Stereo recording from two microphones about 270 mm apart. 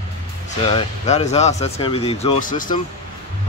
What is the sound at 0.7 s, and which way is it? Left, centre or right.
Speech, left.